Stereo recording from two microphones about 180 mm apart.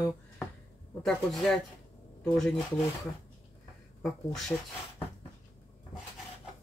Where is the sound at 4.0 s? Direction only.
Centre (ahead or behind).